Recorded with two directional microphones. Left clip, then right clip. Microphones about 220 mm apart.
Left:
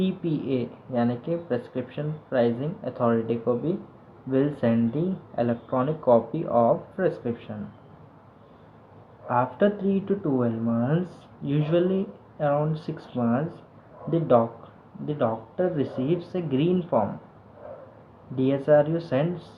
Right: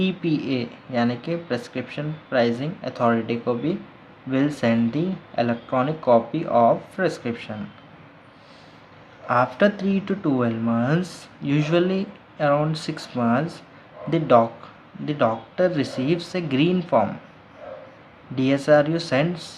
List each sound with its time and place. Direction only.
0.0 s speech: 20° right (ahead or behind)
9.2 s speech: 25° right (ahead or behind)
18.3 s speech: 20° right (ahead or behind)